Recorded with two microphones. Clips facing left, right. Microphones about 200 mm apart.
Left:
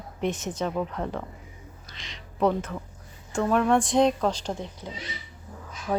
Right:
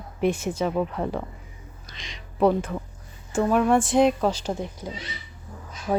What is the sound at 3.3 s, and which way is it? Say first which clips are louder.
Speech: right 2 dB; 5° right (ahead or behind).